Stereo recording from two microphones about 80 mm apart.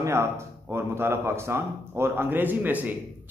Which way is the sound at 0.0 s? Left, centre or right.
Right.